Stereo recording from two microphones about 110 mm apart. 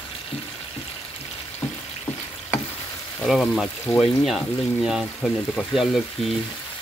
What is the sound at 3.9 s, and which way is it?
Speech, 20° left (ahead or behind).